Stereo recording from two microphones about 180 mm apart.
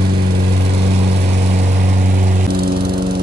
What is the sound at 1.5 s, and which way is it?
Lawn mower, 40° right (ahead or behind).